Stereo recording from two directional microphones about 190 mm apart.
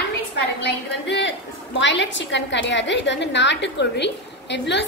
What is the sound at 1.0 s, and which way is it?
A woman's voice, 65° left (ahead or behind).